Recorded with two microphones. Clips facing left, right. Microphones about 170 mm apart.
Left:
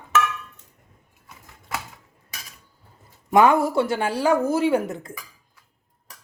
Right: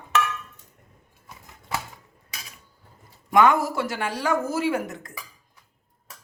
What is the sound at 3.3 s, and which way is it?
Speech, 30° left (ahead or behind).